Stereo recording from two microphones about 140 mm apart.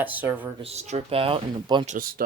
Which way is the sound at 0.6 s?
50° right (ahead or behind).